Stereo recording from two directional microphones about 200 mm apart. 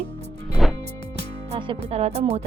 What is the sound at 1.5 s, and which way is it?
Speech, 30° right (ahead or behind).